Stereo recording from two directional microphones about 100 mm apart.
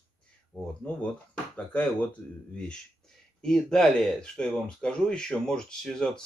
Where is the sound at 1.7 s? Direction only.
15° left (ahead or behind).